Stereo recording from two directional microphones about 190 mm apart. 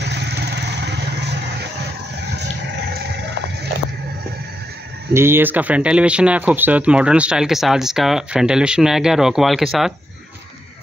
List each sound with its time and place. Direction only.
0.0 s vehicle: 65° right (ahead or behind)
2.3 s a sound: 65° right (ahead or behind)
5.1 s speech: 10° right (ahead or behind)